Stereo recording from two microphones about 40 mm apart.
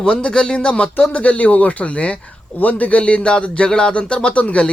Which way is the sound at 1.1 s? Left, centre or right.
Left.